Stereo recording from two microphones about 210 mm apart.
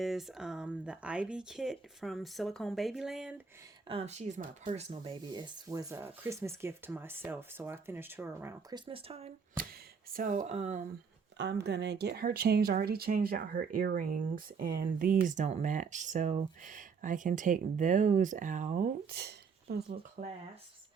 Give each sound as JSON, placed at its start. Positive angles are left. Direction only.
{"t": 0.0, "sound": "speech", "side_deg": 0}
{"t": 3.8, "sound": "speech", "side_deg": -30}
{"t": 8.9, "sound": "speech", "side_deg": -25}
{"t": 10.1, "sound": "speech", "side_deg": -40}
{"t": 11.3, "sound": "speech", "side_deg": -55}